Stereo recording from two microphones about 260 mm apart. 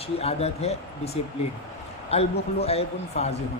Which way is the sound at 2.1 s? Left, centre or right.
Left.